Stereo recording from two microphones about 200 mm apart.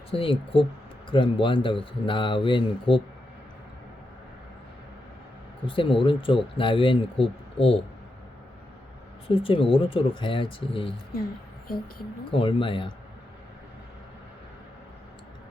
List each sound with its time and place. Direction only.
0.1 s speech: 25° left (ahead or behind)
5.6 s speech: 25° left (ahead or behind)
9.2 s speech: 25° left (ahead or behind)
12.3 s speech: 25° left (ahead or behind)